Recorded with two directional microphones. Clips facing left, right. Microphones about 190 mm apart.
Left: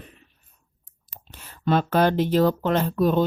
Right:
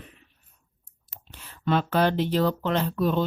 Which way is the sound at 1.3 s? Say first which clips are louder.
Left 3 dB; 45° left (ahead or behind).